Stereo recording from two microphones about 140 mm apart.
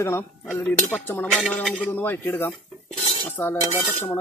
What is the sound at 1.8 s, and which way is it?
Cutlery, 15° left (ahead or behind).